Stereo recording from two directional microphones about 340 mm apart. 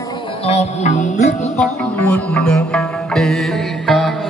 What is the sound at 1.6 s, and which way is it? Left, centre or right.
Music, centre.